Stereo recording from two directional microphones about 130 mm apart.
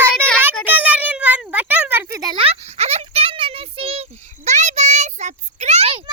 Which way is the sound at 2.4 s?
55° right (ahead or behind).